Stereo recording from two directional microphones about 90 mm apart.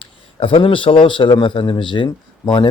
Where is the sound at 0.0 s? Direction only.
75° left (ahead or behind).